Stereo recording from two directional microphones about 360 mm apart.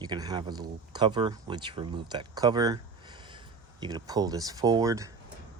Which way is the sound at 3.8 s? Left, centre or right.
Centre.